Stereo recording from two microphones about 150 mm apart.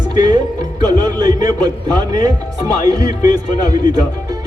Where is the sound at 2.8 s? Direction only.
25° right (ahead or behind).